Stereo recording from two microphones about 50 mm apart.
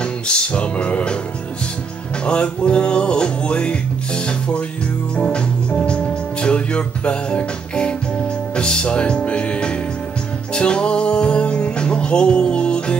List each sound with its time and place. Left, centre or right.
0.0 s music: left
2.2 s music: left